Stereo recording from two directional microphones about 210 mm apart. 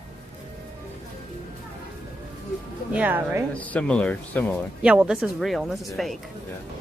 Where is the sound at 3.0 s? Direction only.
10° right (ahead or behind).